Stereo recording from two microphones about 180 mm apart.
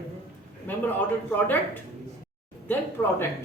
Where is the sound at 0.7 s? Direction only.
10° left (ahead or behind).